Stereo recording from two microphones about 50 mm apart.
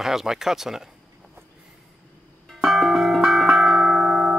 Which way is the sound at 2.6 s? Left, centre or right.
Centre.